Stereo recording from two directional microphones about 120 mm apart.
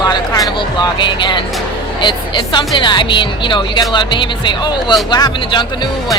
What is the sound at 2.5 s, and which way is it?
Speech, 40° left (ahead or behind).